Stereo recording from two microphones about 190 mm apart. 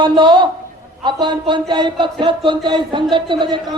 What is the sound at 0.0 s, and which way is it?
Speech, 25° right (ahead or behind).